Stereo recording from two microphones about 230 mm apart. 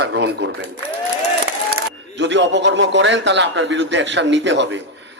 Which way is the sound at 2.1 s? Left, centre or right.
Right.